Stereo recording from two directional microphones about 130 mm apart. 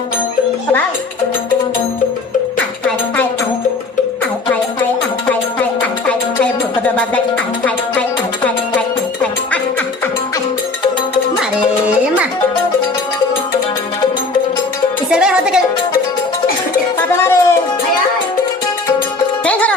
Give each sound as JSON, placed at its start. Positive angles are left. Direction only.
{"t": 6.9, "sound": "music", "side_deg": 10}
{"t": 15.1, "sound": "music", "side_deg": -5}
{"t": 17.1, "sound": "music", "side_deg": 20}
{"t": 19.5, "sound": "music", "side_deg": 10}